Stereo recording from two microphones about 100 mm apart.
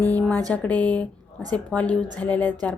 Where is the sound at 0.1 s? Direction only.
20° left (ahead or behind).